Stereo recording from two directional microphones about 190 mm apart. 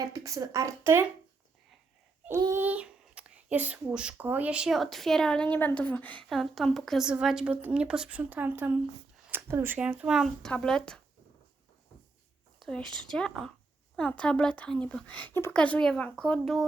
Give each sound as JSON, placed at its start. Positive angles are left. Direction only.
{"t": 0.1, "sound": "a woman's voice", "side_deg": -15}
{"t": 2.2, "sound": "a child's voice", "side_deg": -15}
{"t": 12.5, "sound": "a child's voice", "side_deg": 0}